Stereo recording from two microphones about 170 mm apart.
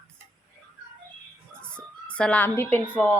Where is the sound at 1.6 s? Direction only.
5° left (ahead or behind).